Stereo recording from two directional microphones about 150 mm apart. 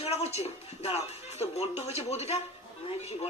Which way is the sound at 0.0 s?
45° left (ahead or behind).